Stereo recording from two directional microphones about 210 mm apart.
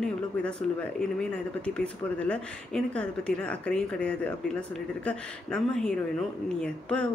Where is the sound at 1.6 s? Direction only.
5° left (ahead or behind).